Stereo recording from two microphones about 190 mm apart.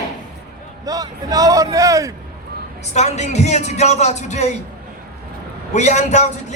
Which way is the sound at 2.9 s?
35° left (ahead or behind).